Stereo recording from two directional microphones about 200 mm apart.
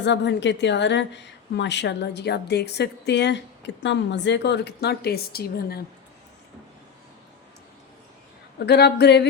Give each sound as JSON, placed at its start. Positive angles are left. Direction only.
{"t": 0.0, "sound": "a woman's voice", "side_deg": 60}
{"t": 8.5, "sound": "a woman's voice", "side_deg": 55}